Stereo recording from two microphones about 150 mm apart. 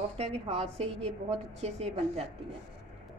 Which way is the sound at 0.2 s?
40° right (ahead or behind).